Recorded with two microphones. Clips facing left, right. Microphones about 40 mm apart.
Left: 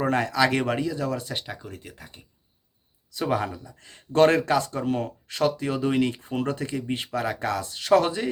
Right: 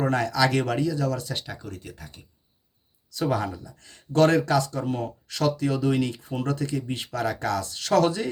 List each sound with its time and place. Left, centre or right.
0.0 s speech: left
4.9 s speech: centre